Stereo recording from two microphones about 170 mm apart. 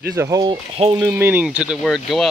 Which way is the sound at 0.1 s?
20° right (ahead or behind).